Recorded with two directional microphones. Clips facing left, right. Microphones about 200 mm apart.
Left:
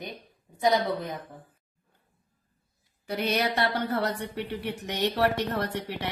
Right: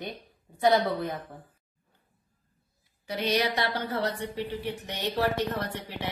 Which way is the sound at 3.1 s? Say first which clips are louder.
Even; 55° left (ahead or behind).